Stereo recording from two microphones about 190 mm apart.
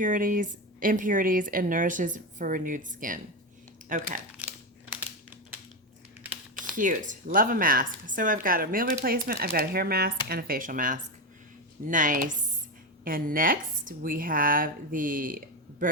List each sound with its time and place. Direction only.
0.0 s a woman's voice: 45° right (ahead or behind)
6.7 s a woman's voice: 45° right (ahead or behind)